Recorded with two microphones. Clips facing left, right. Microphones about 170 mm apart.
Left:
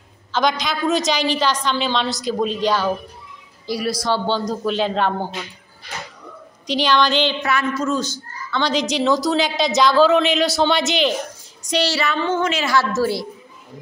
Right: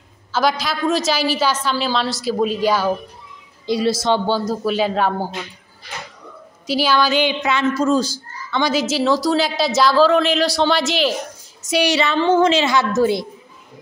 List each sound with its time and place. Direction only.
0.3 s a woman's voice: 5° right (ahead or behind)
3.6 s a woman's voice: 25° right (ahead or behind)
4.3 s a man's voice: 5° right (ahead or behind)
6.7 s a man's voice: 5° right (ahead or behind)
7.7 s a man's voice: 35° right (ahead or behind)
8.5 s a woman's voice: 10° right (ahead or behind)
11.7 s a woman's voice: 15° right (ahead or behind)